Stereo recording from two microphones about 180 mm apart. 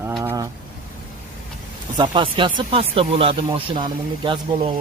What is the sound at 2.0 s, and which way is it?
Speech, 25° right (ahead or behind).